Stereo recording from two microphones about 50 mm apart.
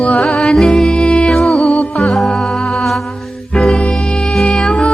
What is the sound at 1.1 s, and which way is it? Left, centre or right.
Music, left.